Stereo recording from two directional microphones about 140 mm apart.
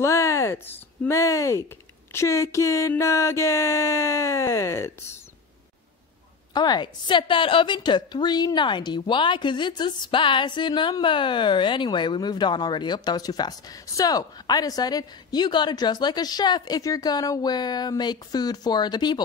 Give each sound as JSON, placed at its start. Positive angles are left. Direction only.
{"t": 0.0, "sound": "speech", "side_deg": 20}
{"t": 2.1, "sound": "a sound", "side_deg": 20}
{"t": 6.5, "sound": "a woman's voice", "side_deg": 30}